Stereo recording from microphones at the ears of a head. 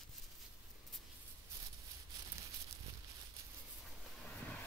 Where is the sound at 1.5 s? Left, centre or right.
Right.